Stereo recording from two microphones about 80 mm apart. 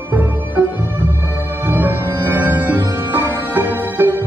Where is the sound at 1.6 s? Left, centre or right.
Right.